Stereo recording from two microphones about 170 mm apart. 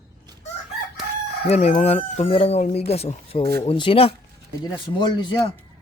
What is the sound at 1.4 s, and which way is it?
A man's voice, 40° left (ahead or behind).